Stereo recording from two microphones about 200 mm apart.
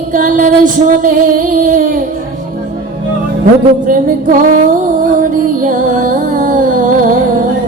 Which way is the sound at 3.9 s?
45° right (ahead or behind).